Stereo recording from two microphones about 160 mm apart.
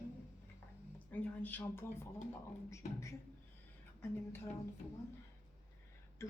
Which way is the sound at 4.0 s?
15° left (ahead or behind).